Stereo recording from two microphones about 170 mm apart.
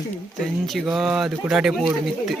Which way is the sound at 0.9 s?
Centre (ahead or behind).